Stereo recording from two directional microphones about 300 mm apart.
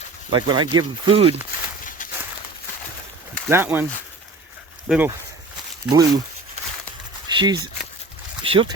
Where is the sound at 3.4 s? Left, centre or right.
Centre.